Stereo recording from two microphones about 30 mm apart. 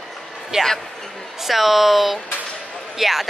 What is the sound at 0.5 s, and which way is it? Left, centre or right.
Speech, right.